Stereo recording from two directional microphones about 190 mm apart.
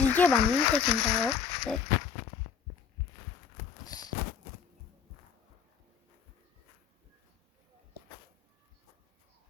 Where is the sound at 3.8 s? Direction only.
20° left (ahead or behind).